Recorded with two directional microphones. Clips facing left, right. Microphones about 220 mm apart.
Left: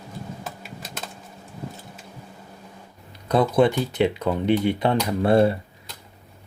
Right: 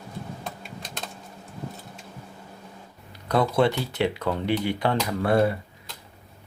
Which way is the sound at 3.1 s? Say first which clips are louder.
Left 3 dB; 20° left (ahead or behind).